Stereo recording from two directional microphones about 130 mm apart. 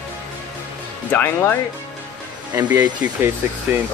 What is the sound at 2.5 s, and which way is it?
Speech, 25° right (ahead or behind).